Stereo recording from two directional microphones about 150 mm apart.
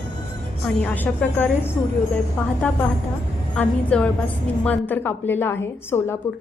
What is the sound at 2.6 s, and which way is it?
A woman's voice, 10° left (ahead or behind).